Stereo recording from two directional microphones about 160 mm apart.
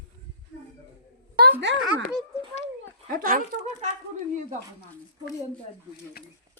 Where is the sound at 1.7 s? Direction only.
90° right.